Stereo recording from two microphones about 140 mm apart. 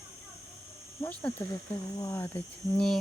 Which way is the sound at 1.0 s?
10° left (ahead or behind).